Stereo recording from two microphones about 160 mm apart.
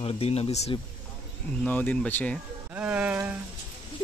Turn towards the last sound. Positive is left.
turn(degrees=-10)  # may be behind; listen again after turning